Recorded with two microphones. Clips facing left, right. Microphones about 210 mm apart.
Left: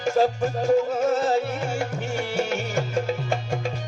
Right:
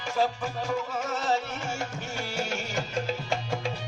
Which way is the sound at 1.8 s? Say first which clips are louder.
Left 7 dB; 60° left (ahead or behind).